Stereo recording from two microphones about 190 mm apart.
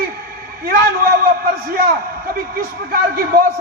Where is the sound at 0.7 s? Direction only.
50° right (ahead or behind).